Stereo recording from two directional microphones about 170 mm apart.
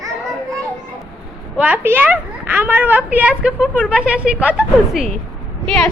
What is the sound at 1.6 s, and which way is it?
A woman's voice, 10° right (ahead or behind).